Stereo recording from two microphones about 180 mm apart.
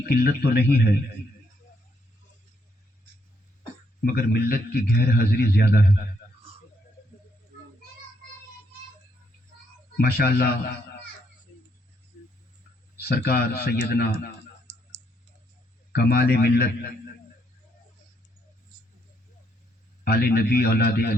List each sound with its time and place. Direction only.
0.0 s a man's voice: 60° left (ahead or behind)
4.0 s a man's voice: 55° left (ahead or behind)
10.0 s a man's voice: 60° left (ahead or behind)
13.0 s a man's voice: 65° left (ahead or behind)
15.9 s a man's voice: 60° left (ahead or behind)
20.1 s a man's voice: 60° left (ahead or behind)